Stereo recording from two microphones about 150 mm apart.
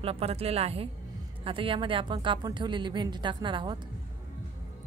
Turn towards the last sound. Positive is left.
turn(degrees=-30)  # may be behind; listen again after turning